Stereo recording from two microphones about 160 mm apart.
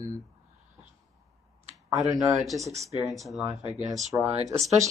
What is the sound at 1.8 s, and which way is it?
Speech, 20° right (ahead or behind).